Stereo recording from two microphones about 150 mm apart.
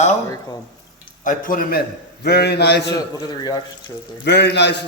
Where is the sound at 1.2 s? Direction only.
60° left (ahead or behind).